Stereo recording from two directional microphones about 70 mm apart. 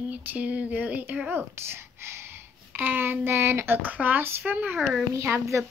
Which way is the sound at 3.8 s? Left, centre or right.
Right.